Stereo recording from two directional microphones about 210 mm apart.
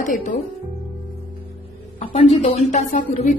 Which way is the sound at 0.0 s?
40° left (ahead or behind).